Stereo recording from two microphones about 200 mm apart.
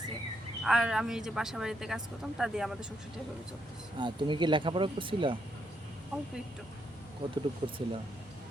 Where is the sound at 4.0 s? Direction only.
25° right (ahead or behind).